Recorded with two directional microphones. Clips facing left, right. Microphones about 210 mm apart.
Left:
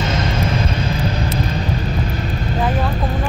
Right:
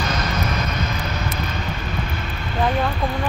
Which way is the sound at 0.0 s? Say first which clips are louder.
Left 4 dB; 25° left (ahead or behind).